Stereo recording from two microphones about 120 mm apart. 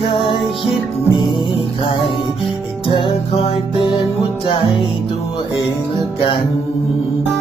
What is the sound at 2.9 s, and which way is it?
Music, 45° left (ahead or behind).